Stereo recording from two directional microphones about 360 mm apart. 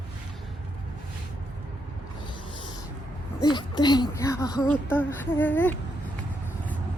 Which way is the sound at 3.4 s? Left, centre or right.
Centre.